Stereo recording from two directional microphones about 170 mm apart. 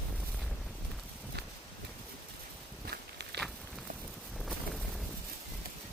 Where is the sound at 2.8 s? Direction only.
70° right (ahead or behind).